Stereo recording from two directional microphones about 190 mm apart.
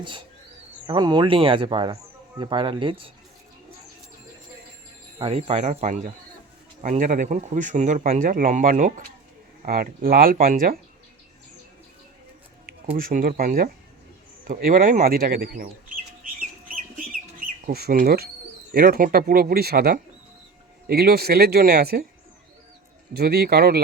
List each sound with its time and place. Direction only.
0.9 s speech: 25° right (ahead or behind)
5.2 s speech: 30° right (ahead or behind); by 10.8 s 50° right (ahead or behind)
13.0 s speech: 45° right (ahead or behind)
17.7 s speech: 55° right (ahead or behind)
23.1 s speech: 55° right (ahead or behind)